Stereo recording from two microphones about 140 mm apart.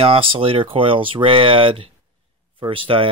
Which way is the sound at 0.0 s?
40° right (ahead or behind).